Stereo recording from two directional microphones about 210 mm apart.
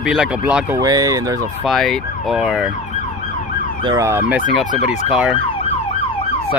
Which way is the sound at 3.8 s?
20° right (ahead or behind).